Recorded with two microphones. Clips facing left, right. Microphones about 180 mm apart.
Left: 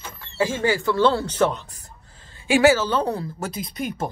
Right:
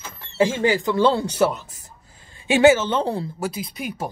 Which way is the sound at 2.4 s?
20° right (ahead or behind).